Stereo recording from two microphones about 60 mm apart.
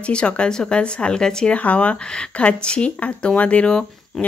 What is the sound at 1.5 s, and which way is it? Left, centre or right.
Speech, left.